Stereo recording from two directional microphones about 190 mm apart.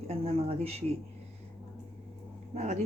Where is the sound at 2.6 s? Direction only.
35° right (ahead or behind).